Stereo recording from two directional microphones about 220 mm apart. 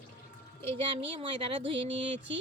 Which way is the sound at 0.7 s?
25° right (ahead or behind).